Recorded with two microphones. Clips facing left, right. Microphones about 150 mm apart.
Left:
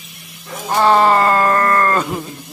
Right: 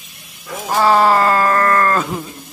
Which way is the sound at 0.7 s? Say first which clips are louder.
Even; 5° right (ahead or behind).